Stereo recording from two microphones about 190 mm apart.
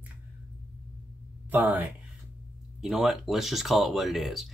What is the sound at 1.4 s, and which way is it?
Speech, 10° right (ahead or behind).